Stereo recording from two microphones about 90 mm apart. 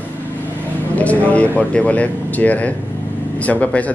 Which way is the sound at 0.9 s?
15° left (ahead or behind).